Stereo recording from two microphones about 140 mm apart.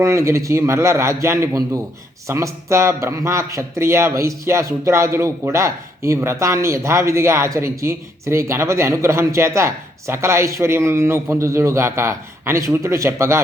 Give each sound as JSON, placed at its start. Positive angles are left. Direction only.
{"t": 0.0, "sound": "a man's voice", "side_deg": -20}